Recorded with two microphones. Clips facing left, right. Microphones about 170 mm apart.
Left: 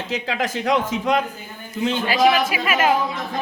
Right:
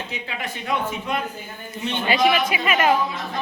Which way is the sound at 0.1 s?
90° left.